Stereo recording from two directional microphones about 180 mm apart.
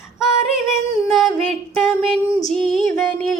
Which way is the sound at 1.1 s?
Centre (ahead or behind).